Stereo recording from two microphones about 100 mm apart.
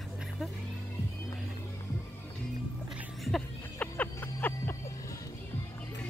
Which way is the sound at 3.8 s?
20° left (ahead or behind).